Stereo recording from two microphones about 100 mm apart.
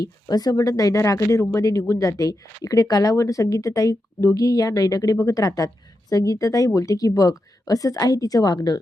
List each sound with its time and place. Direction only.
0.3 s speech: 40° left (ahead or behind)